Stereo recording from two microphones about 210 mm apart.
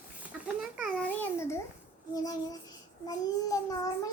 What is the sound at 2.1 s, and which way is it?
Child singing, 20° left (ahead or behind).